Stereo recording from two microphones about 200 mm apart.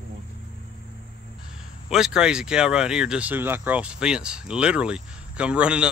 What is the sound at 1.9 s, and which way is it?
Speech, 5° right (ahead or behind).